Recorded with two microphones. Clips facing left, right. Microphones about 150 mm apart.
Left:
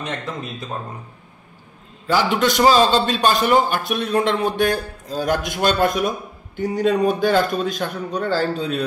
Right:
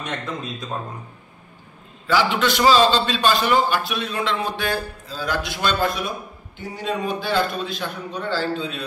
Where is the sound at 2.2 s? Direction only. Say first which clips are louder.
Left 3 dB; 45° left (ahead or behind).